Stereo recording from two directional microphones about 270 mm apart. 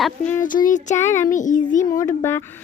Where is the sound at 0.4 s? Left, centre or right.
Left.